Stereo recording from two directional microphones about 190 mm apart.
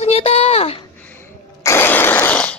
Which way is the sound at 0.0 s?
35° left (ahead or behind).